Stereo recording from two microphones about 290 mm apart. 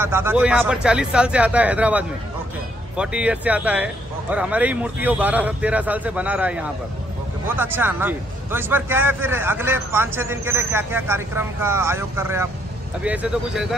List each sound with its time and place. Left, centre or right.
0.0 s a man's voice: centre